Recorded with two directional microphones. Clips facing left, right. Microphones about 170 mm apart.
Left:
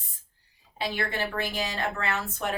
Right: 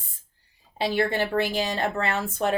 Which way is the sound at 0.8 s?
30° right (ahead or behind).